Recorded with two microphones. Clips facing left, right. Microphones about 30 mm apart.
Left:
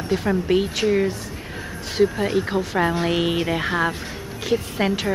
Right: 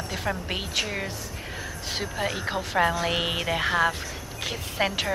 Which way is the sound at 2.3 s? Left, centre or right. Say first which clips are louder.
Left 5 dB; centre.